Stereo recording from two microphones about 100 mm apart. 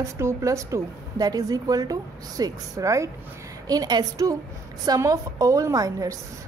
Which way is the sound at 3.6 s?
40° right (ahead or behind).